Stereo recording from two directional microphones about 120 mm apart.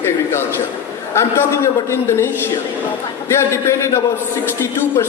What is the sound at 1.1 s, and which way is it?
A man's voice, 20° left (ahead or behind).